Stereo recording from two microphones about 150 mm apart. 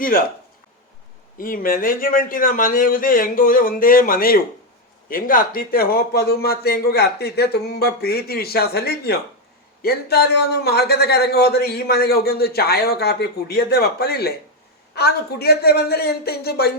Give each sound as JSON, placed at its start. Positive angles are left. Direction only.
{"t": 0.0, "sound": "speech", "side_deg": 70}
{"t": 1.4, "sound": "a man's voice", "side_deg": 70}